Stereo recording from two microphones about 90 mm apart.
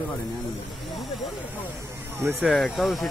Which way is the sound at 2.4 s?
Centre (ahead or behind).